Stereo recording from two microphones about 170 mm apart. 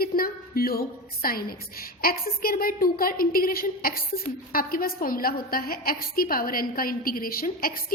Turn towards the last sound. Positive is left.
turn(degrees=60)  # may be behind; listen again after turning